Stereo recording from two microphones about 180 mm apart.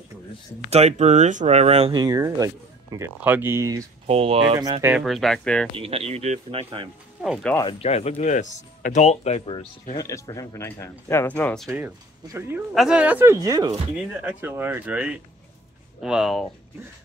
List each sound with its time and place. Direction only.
0.7 s speech: 40° right (ahead or behind)
2.0 s speech: 20° right (ahead or behind)
4.1 s speech: 35° right (ahead or behind)
4.8 s speech: centre (ahead or behind)
5.8 s speech: 35° right (ahead or behind)
7.2 s speech: 5° right (ahead or behind)
7.6 s speech: 35° left (ahead or behind)
9.9 s speech: 20° left (ahead or behind)
11.7 s speech: 10° right (ahead or behind)